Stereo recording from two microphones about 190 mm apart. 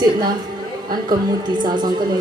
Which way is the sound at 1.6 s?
25° right (ahead or behind).